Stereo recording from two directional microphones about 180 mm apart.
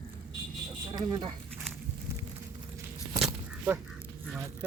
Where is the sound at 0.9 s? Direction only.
25° right (ahead or behind).